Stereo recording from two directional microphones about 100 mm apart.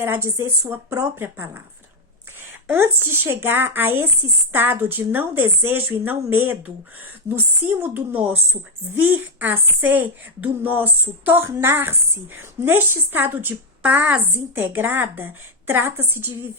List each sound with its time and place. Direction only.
0.0 s a woman's voice: 25° right (ahead or behind)
2.6 s a woman's voice: 20° right (ahead or behind)